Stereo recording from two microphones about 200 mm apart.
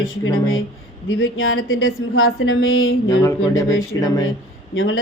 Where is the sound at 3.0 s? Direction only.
15° left (ahead or behind).